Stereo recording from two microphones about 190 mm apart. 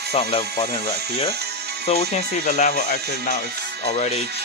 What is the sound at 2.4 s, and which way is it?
Speech, 45° left (ahead or behind).